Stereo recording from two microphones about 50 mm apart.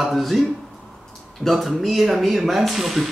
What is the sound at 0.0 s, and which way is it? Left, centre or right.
Speech, centre.